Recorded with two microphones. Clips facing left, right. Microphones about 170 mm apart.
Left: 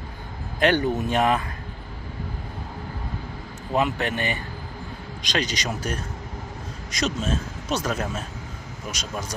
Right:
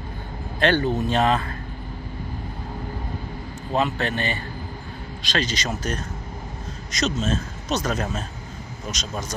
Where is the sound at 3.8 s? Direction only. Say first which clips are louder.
Even; 15° left (ahead or behind).